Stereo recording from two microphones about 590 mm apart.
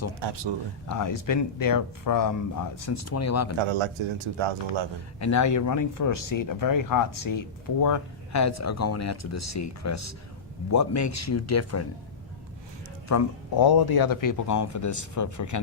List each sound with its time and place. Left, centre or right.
0.2 s a man's voice: right
0.9 s speech: left
3.6 s a man's voice: right
5.2 s speech: left
13.1 s speech: left